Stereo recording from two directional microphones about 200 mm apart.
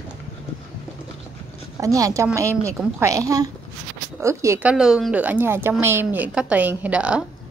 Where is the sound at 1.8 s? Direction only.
15° right (ahead or behind).